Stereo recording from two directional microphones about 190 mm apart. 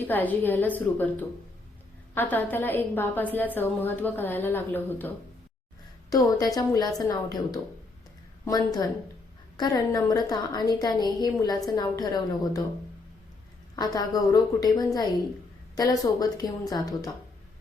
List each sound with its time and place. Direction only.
0.1 s a woman's voice: 10° left (ahead or behind)
13.7 s a woman's voice: 20° left (ahead or behind)